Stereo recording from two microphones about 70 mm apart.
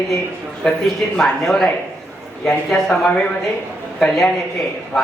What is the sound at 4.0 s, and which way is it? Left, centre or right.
Speech, centre.